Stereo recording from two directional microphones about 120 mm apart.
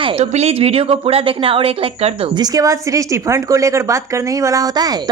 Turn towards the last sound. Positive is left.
turn(degrees=-30)  # may be behind; listen again after turning